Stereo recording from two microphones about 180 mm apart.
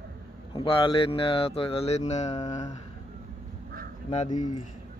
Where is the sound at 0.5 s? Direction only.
30° left (ahead or behind).